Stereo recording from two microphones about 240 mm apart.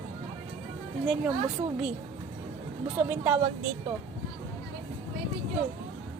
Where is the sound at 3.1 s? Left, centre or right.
Centre.